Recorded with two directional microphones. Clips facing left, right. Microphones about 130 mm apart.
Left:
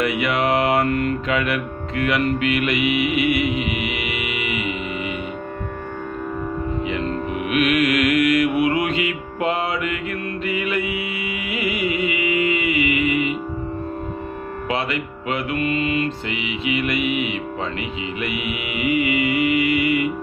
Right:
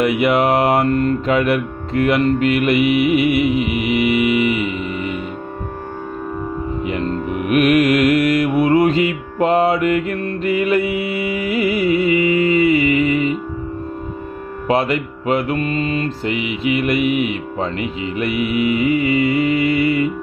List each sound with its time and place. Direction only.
0.2 s mantra: 45° right (ahead or behind)
0.7 s mantra: 30° right (ahead or behind)
1.3 s mantra: 40° right (ahead or behind)
3.3 s music: centre (ahead or behind)
4.2 s mantra: 40° right (ahead or behind)
6.9 s music: 45° right (ahead or behind)
14.7 s music: 40° right (ahead or behind)